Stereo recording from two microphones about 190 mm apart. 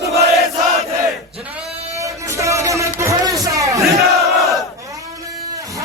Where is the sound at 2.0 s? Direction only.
15° right (ahead or behind).